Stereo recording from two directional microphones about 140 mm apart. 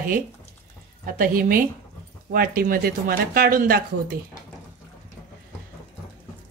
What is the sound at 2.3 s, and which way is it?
Speech, 90° right.